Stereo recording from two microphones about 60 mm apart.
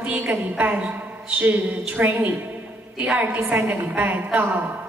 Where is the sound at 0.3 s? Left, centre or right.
Right.